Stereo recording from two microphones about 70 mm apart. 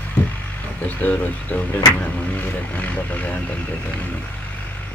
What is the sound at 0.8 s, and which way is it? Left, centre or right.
Speech, left.